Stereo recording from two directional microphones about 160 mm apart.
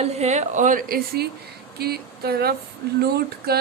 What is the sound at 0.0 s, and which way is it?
Speech, 45° right (ahead or behind).